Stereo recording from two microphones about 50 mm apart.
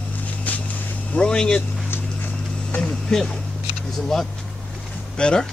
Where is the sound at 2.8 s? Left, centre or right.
Centre.